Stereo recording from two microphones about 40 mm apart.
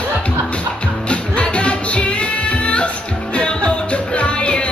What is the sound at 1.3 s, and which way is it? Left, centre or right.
Music, left.